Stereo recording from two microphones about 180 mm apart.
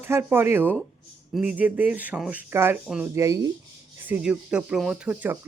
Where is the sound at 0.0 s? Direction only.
10° right (ahead or behind).